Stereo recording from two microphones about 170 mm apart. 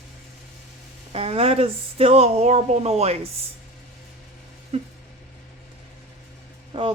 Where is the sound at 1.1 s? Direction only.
35° right (ahead or behind).